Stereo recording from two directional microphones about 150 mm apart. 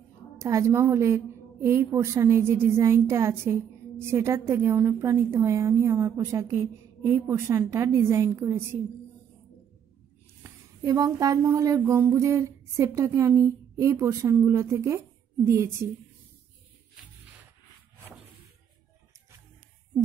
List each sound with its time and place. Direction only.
0.4 s a woman's voice: 20° right (ahead or behind)
10.4 s speech: 25° right (ahead or behind)